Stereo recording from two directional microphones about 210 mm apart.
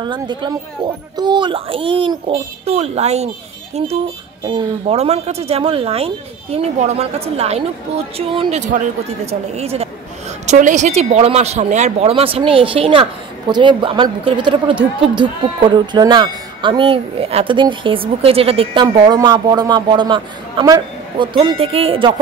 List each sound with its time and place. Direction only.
0.0 s speech: 20° right (ahead or behind)
4.5 s speech: 25° right (ahead or behind)